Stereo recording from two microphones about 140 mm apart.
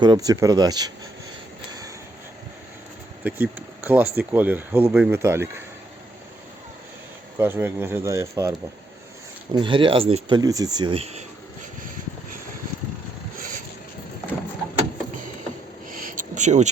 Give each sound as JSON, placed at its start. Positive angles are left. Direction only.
{"t": 0.0, "sound": "speech", "side_deg": -30}
{"t": 3.2, "sound": "speech", "side_deg": -10}
{"t": 7.3, "sound": "speech", "side_deg": -15}
{"t": 9.5, "sound": "speech", "side_deg": -35}
{"t": 10.9, "sound": "speech", "side_deg": -50}
{"t": 15.9, "sound": "a sound", "side_deg": -80}